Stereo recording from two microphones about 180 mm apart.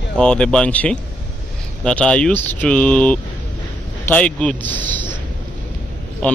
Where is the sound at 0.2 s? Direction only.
5° left (ahead or behind).